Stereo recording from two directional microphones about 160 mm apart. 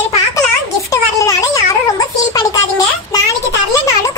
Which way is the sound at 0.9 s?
20° left (ahead or behind).